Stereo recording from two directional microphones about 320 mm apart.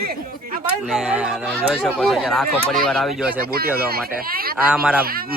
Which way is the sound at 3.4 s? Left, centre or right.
Right.